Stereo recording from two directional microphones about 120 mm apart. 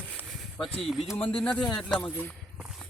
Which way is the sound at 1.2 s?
50° left (ahead or behind).